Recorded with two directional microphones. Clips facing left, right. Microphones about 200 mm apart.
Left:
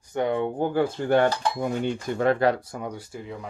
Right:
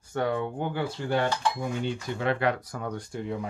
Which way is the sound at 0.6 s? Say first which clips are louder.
Left 6 dB; 45° left (ahead or behind).